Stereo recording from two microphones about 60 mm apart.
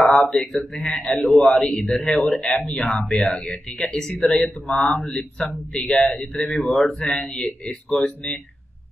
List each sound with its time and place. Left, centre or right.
0.0 s speech: centre
4.9 s speech: left
5.4 s speech: centre
6.7 s speech: centre
7.0 s speech: centre